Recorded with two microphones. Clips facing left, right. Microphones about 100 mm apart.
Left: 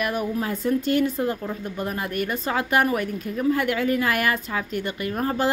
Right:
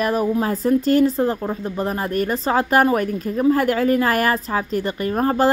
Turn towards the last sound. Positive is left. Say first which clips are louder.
# right 6 dB
turn(degrees=-40)  # may be behind; listen again after turning